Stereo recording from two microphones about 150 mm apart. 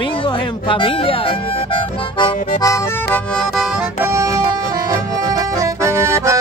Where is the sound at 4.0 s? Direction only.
20° right (ahead or behind).